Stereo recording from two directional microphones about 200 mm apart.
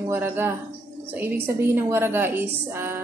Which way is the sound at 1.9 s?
10° right (ahead or behind).